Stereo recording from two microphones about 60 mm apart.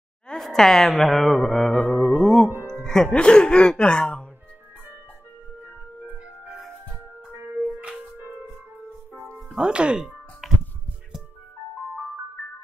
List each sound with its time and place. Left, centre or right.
0.3 s speech: centre
2.4 s music: right
2.7 s music: centre
3.1 s speech: centre
7.2 s music: right
9.2 s music: centre
9.6 s speech: centre
10.4 s music: centre